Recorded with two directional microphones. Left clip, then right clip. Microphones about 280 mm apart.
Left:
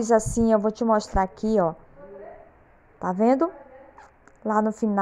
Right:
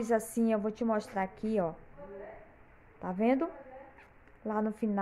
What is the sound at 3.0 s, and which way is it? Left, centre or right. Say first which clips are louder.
A woman's voice: left 9 dB; centre.